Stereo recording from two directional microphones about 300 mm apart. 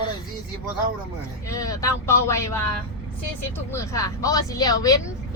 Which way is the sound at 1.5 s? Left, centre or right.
Centre.